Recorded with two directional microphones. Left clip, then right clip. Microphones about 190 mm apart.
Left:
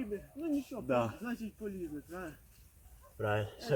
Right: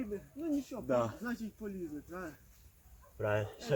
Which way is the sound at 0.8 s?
30° left (ahead or behind).